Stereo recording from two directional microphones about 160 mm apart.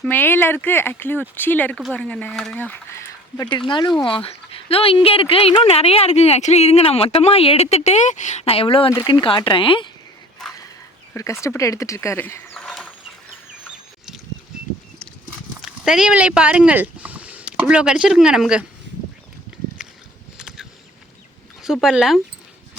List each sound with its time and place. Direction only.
0.0 s speech: 10° left (ahead or behind); by 8.9 s 35° left (ahead or behind)
8.9 s speech: 25° left (ahead or behind)
11.1 s speech: 20° left (ahead or behind); by 12.9 s 5° left (ahead or behind)
15.6 s speech: 5° right (ahead or behind)
19.8 s a sound: 5° right (ahead or behind)
21.6 s speech: centre (ahead or behind)